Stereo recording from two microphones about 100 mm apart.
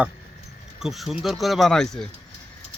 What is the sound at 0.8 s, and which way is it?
Speech, 5° right (ahead or behind).